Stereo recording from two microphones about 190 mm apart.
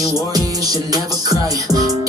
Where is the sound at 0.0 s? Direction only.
20° right (ahead or behind).